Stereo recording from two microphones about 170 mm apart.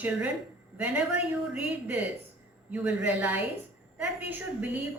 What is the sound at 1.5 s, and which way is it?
A woman's voice, 10° right (ahead or behind).